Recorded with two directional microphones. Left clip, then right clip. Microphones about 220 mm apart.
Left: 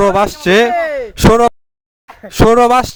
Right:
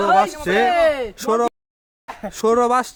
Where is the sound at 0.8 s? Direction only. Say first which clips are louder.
Even; 30° right (ahead or behind).